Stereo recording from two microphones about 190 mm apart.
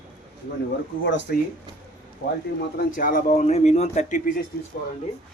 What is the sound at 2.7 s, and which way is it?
Speech, 45° left (ahead or behind).